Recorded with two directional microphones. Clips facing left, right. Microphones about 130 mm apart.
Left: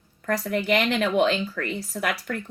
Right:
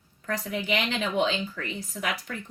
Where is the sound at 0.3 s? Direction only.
70° left (ahead or behind).